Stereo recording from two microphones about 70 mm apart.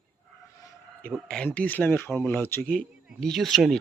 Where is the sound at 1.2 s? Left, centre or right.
Centre.